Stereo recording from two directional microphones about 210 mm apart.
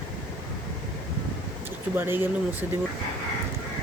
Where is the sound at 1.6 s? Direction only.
10° right (ahead or behind).